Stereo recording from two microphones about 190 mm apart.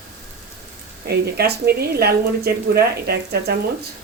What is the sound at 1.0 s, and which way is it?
A woman's voice, 55° right (ahead or behind).